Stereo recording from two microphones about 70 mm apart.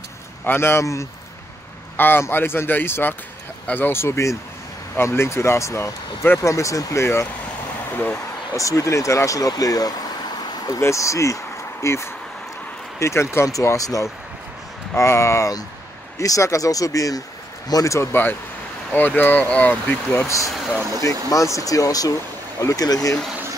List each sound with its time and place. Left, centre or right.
0.5 s speech: left
2.0 s speech: left
6.5 s speech: left
8.5 s speech: left
10.8 s speech: left
13.5 s speech: left
15.0 s speech: left
17.9 s speech: left
21.0 s speech: left